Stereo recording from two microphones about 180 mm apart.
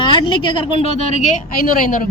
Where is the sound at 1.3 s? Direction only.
50° left (ahead or behind).